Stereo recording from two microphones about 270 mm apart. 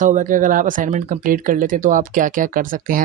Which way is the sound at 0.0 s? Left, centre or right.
Right.